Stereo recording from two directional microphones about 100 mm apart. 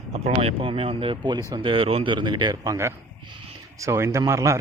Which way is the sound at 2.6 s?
35° right (ahead or behind).